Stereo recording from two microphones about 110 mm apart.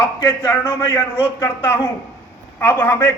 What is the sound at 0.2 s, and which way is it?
Speech, 40° left (ahead or behind).